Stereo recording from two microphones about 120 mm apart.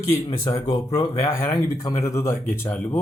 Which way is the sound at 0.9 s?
25° left (ahead or behind).